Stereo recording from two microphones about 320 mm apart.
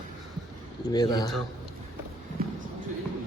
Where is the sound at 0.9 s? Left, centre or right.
Centre.